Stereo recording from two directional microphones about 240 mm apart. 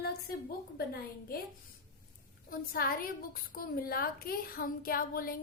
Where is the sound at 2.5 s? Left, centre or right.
Left.